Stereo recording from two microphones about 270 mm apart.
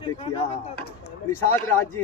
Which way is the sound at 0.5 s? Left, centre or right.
Left.